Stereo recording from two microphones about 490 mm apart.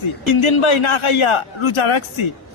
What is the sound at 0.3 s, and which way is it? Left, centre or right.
Speech, left.